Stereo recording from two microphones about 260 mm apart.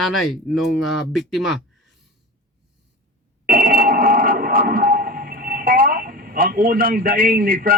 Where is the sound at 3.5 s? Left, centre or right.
Right.